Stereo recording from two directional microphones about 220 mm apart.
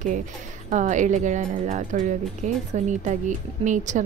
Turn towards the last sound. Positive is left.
turn(degrees=-35)  # may be behind; listen again after turning